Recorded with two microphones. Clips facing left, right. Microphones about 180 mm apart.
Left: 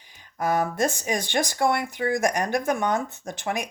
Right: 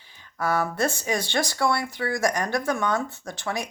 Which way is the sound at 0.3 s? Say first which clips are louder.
Left 1 dB; 20° left (ahead or behind).